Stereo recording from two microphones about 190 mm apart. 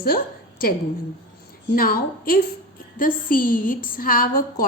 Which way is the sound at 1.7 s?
50° left (ahead or behind).